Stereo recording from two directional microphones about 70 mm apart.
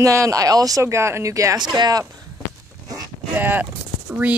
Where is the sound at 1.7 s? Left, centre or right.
Right.